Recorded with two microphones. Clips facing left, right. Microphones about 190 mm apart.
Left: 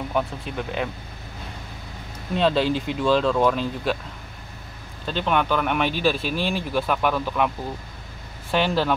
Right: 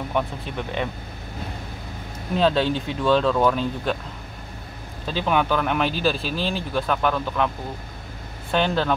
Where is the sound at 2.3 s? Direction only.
Centre (ahead or behind).